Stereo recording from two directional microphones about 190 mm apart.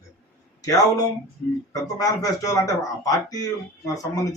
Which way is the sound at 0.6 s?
20° left (ahead or behind).